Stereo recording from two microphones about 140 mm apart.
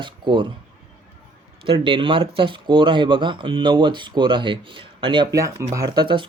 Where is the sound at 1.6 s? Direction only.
40° right (ahead or behind).